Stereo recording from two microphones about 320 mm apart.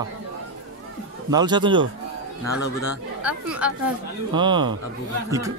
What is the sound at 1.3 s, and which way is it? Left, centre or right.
Speech, centre.